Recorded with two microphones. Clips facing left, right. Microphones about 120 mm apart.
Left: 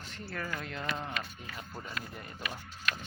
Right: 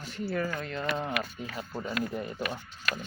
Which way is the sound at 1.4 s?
35° right (ahead or behind).